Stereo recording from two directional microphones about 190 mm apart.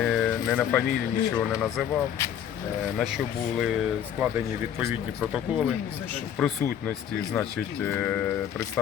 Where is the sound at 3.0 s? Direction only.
Centre (ahead or behind).